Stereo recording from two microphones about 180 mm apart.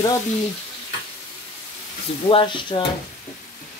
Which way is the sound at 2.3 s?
30° left (ahead or behind).